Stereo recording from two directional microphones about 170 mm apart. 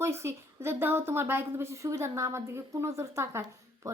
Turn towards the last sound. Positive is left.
turn(degrees=-15)  # may be behind; listen again after turning